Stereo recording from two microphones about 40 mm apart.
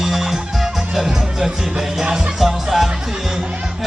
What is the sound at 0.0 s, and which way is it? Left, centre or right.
Music, centre.